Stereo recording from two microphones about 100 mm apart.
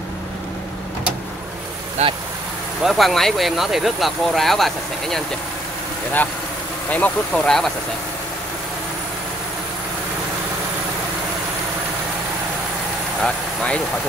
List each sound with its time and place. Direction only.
2.0 s speech: 90° right
2.8 s speech: centre (ahead or behind)
6.9 s speech: 10° left (ahead or behind)
13.2 s speech: 10° left (ahead or behind)